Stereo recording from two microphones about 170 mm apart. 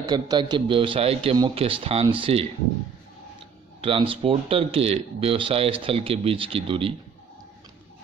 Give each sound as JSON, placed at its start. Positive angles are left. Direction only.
{"t": 0.1, "sound": "speech", "side_deg": -25}
{"t": 3.8, "sound": "speech", "side_deg": -30}